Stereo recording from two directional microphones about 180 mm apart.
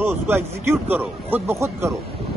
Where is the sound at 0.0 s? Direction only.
10° right (ahead or behind).